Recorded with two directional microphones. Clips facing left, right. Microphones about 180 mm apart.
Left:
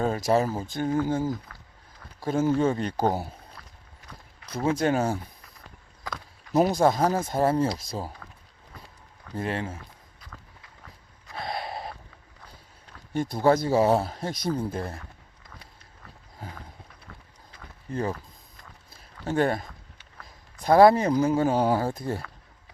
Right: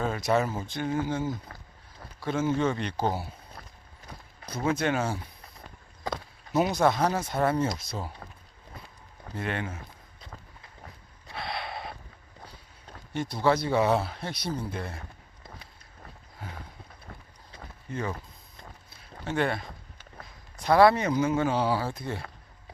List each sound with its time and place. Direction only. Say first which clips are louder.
0.0 s speech: left 3 dB; 35° left (ahead or behind)
3.6 s a sound: right 2 dB; 45° right (ahead or behind)
4.6 s speech: left 3 dB; 40° left (ahead or behind)
6.0 s a sound: right 4 dB; 25° right (ahead or behind)
6.5 s speech: left 3 dB; 35° left (ahead or behind)
8.2 s a sound: right 2 dB; 30° right (ahead or behind)
9.4 s speech: left 2 dB; 30° left (ahead or behind)
10.2 s run: right 2 dB; 25° right (ahead or behind)
11.3 s gasp: left 2 dB; 45° left (ahead or behind)
13.1 s speech: left 4 dB; 45° left (ahead or behind)
19.2 s speech: left 4 dB; 40° left (ahead or behind)
20.7 s speech: left 3 dB; 40° left (ahead or behind)